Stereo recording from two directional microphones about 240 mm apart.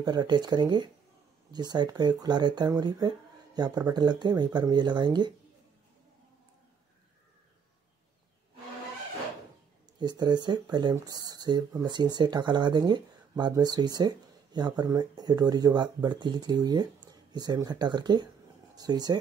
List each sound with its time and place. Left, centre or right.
0.0 s speech: centre
9.9 s speech: centre